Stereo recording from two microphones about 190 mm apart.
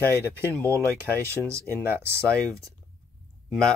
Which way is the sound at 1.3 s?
15° right (ahead or behind).